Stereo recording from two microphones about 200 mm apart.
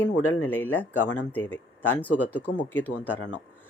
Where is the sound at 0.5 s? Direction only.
10° left (ahead or behind).